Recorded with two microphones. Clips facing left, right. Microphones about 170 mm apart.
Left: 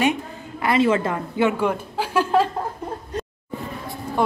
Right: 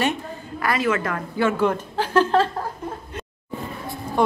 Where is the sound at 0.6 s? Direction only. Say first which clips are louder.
Left 4 dB; 25° left (ahead or behind); by 2.4 s 10° left (ahead or behind).